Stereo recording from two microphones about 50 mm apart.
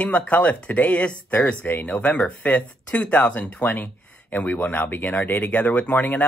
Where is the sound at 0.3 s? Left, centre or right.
Left.